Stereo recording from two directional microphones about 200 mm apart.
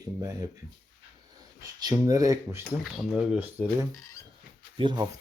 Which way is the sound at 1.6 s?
15° right (ahead or behind).